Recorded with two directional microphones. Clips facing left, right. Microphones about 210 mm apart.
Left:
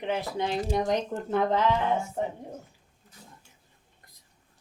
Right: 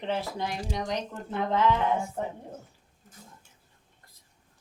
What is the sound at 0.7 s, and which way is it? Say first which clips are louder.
Speech: left 6 dB; 50° left (ahead or behind).